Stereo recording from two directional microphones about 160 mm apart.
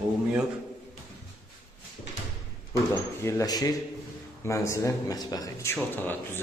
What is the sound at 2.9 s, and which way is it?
Speech, 20° left (ahead or behind).